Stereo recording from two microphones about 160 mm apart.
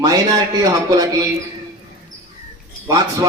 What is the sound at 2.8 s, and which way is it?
Speech, 25° right (ahead or behind).